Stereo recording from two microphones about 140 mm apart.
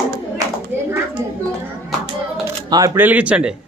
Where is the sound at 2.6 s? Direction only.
25° right (ahead or behind).